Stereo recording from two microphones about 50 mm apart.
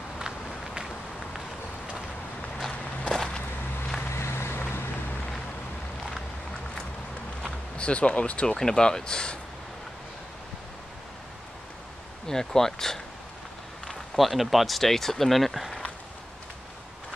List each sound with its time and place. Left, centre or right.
2.7 s walk: left
4.1 s vehicle: left
7.7 s speech: left
12.3 s speech: centre
14.1 s speech: centre